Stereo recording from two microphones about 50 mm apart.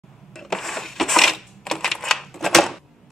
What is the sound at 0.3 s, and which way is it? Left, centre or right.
Cash register, centre.